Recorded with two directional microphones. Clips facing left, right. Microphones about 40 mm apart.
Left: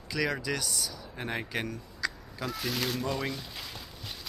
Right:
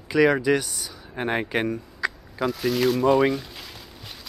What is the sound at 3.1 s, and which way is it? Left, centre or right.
Speech, right.